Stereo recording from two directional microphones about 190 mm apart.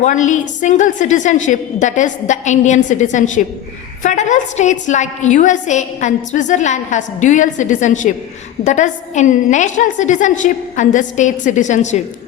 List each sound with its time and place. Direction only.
0.0 s a woman's voice: 40° left (ahead or behind)